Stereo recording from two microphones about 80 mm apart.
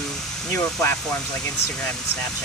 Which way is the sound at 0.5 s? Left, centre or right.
Left.